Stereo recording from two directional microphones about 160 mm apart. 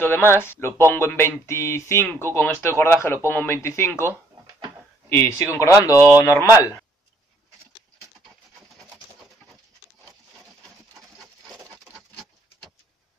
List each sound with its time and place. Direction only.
0.0 s speech: 15° left (ahead or behind)
5.1 s speech: 15° left (ahead or behind)
5.9 s speech: 10° right (ahead or behind)
6.2 s speech: 20° left (ahead or behind)